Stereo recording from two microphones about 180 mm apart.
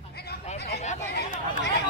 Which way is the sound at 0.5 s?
65° left (ahead or behind).